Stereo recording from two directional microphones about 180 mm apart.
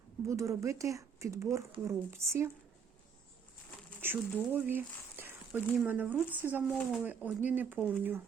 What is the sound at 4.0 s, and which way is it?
Speech, 10° right (ahead or behind).